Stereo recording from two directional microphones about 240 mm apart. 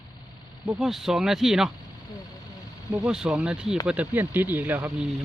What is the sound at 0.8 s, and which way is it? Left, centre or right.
Speech, centre.